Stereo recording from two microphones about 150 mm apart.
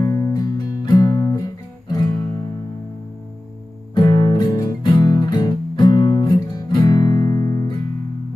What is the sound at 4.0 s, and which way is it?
Music, 25° left (ahead or behind).